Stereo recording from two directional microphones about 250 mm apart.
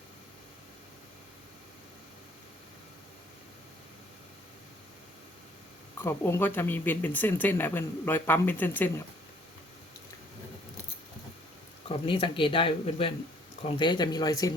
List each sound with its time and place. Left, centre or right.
6.0 s speech: centre
11.9 s speech: left